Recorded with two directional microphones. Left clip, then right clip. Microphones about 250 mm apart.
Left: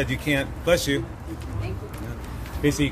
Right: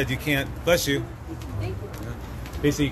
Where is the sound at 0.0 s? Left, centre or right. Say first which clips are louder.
Left 1 dB; centre.